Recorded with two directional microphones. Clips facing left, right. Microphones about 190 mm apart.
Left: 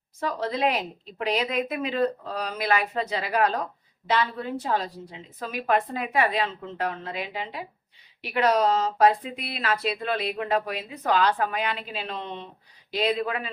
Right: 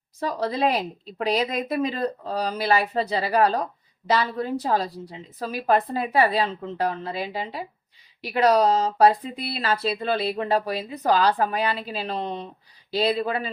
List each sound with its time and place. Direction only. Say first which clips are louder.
0.2 s speech: right 2 dB; 35° right (ahead or behind)